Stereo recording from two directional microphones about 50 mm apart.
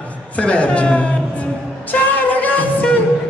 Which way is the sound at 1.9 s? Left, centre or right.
Left.